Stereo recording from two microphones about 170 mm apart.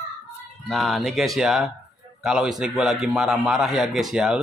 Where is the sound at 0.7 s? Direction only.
Centre (ahead or behind).